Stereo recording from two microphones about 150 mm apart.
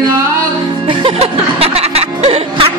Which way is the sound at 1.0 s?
40° right (ahead or behind).